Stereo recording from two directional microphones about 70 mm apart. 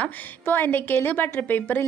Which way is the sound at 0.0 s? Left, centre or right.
Left.